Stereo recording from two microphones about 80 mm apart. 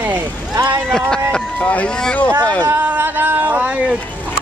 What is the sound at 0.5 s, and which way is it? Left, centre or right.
Speech, right.